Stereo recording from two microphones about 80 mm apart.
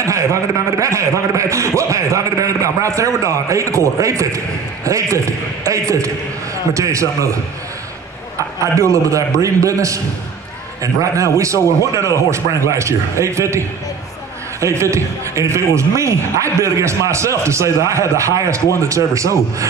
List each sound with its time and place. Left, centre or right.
0.0 s a man's voice: right
8.7 s a man's voice: right